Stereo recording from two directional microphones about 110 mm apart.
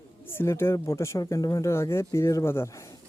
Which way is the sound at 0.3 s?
20° left (ahead or behind).